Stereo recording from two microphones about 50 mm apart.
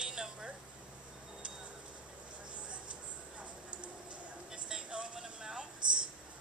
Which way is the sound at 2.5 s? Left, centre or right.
Right.